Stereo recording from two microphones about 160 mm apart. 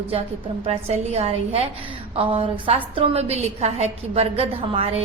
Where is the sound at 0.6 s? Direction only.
40° right (ahead or behind).